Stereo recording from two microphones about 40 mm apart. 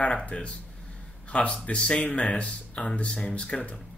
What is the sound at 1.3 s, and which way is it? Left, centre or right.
Speech, left.